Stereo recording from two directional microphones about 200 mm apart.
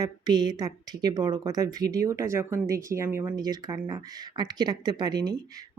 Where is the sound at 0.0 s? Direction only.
20° right (ahead or behind).